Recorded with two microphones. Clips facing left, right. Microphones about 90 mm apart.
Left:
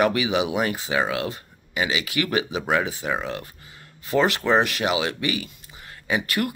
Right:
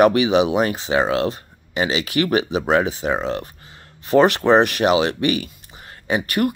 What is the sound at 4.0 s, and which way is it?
Speech, 60° right (ahead or behind).